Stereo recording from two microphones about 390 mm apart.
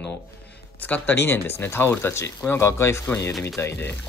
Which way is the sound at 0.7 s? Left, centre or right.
Centre.